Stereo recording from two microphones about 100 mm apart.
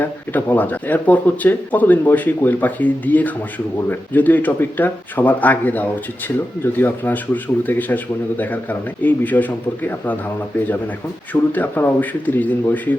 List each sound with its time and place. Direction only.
0.0 s speech: 20° left (ahead or behind)
11.5 s speech: 20° left (ahead or behind)